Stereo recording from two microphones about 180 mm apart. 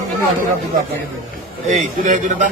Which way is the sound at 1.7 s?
45° right (ahead or behind).